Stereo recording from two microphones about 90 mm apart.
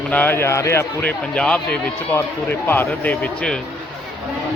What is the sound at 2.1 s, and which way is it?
Speech, 25° left (ahead or behind).